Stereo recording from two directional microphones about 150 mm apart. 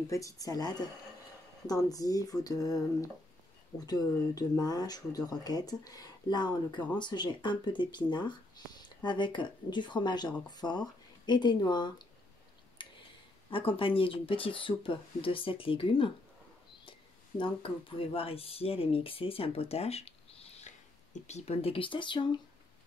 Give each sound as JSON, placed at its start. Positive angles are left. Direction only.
{"t": 0.1, "sound": "speech", "side_deg": 20}
{"t": 12.8, "sound": "a sound", "side_deg": 35}
{"t": 13.5, "sound": "speech", "side_deg": 35}
{"t": 17.4, "sound": "speech", "side_deg": 35}